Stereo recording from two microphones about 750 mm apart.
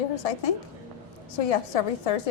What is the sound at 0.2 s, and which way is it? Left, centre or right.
A woman's voice, left.